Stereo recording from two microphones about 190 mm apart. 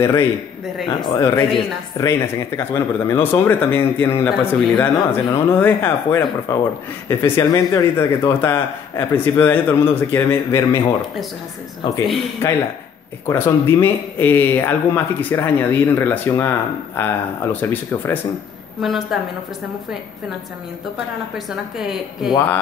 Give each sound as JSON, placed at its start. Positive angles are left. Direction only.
{"t": 0.0, "sound": "speech", "side_deg": 15}
{"t": 12.4, "sound": "speech", "side_deg": 10}
{"t": 18.8, "sound": "a woman's voice", "side_deg": 0}
{"t": 21.5, "sound": "a woman's voice", "side_deg": 0}